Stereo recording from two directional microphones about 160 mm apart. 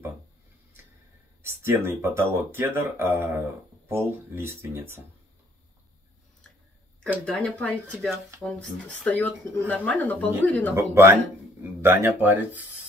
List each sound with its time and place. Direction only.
1.4 s speech: 15° right (ahead or behind)
7.2 s speech: 10° left (ahead or behind)
10.8 s speech: 15° right (ahead or behind)